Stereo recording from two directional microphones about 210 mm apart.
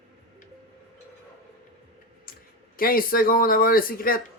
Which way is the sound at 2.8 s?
45° left (ahead or behind).